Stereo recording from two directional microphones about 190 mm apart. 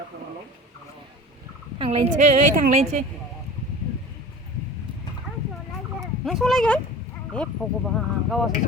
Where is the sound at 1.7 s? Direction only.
30° right (ahead or behind).